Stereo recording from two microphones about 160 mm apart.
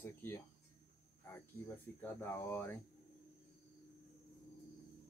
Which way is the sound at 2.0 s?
10° left (ahead or behind).